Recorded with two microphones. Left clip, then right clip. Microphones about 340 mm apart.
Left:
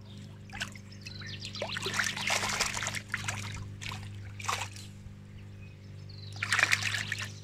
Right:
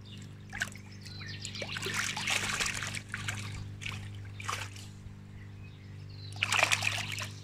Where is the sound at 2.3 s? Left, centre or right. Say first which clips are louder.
Left 1 dB; centre.